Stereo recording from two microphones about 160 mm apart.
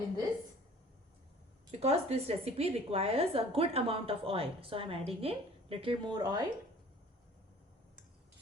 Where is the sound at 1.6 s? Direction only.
40° right (ahead or behind).